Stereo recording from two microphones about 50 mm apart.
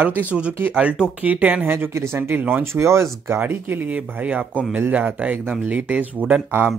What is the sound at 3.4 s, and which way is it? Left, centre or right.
Speech, right.